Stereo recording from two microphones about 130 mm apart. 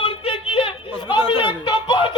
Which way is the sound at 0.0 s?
45° left (ahead or behind).